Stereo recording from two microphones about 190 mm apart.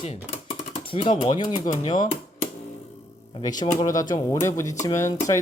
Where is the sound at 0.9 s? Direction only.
25° left (ahead or behind).